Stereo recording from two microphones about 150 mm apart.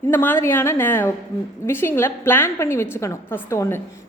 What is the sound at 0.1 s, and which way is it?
A woman's voice, 15° left (ahead or behind).